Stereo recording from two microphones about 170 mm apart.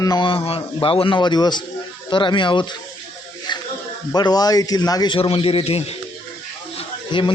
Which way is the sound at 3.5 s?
25° left (ahead or behind).